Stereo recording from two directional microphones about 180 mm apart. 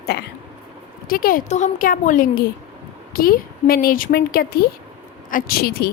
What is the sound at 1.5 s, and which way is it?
A woman's voice, 40° left (ahead or behind).